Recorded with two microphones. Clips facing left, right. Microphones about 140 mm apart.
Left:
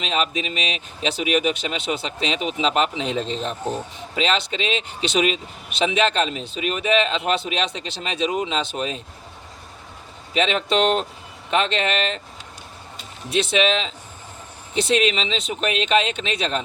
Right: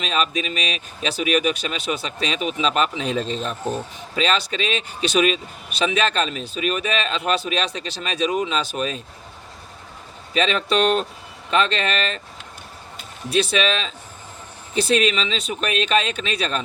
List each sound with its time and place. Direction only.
0.0 s speech: 20° left (ahead or behind)
10.3 s speech: 20° left (ahead or behind)
13.3 s speech: 20° left (ahead or behind)